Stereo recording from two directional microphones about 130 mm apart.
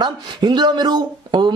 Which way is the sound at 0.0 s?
35° right (ahead or behind).